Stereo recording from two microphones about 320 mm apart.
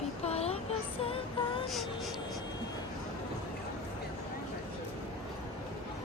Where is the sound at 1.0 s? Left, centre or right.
Centre.